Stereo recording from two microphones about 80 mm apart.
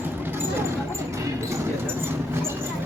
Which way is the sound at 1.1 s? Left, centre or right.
Right.